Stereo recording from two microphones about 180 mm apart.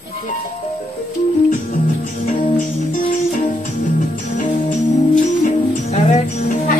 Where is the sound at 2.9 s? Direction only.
45° left (ahead or behind).